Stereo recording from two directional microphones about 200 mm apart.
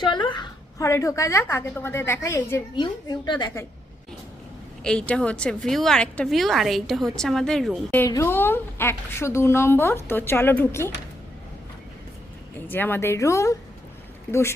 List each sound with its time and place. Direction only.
0.0 s a woman's voice: 25° left (ahead or behind)
4.8 s a woman's voice: 5° left (ahead or behind)
12.5 s a woman's voice: 10° left (ahead or behind)